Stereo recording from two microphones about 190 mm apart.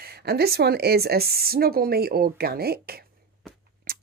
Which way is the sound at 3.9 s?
50° right (ahead or behind).